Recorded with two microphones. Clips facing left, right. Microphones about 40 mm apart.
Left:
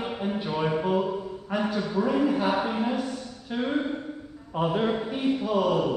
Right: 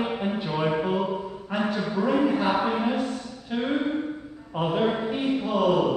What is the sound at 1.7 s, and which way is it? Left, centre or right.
A man's voice, centre.